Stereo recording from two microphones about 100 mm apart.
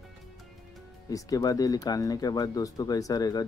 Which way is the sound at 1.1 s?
35° left (ahead or behind).